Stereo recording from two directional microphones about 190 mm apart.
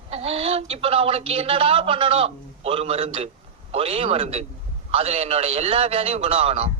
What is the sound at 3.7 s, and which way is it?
A man's voice, 30° right (ahead or behind).